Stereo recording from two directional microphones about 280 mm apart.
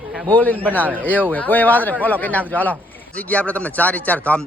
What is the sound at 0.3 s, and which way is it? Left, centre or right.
Speech, centre.